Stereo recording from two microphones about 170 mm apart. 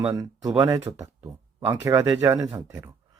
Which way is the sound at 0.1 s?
20° right (ahead or behind).